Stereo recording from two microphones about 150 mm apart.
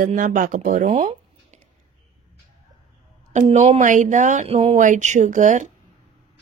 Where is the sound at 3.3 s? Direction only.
50° right (ahead or behind).